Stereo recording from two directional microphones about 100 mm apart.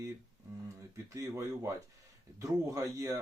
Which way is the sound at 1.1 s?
30° right (ahead or behind).